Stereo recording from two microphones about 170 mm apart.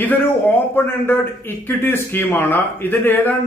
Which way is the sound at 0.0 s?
10° left (ahead or behind).